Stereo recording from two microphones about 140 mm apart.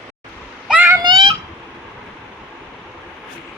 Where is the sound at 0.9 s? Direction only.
30° right (ahead or behind).